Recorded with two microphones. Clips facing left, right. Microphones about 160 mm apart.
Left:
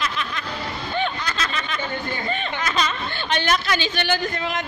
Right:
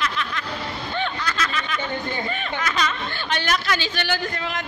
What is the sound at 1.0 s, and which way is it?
Snicker, 25° left (ahead or behind).